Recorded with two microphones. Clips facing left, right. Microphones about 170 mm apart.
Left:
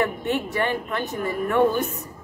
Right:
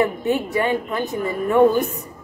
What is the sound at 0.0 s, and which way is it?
A woman's voice, 15° right (ahead or behind).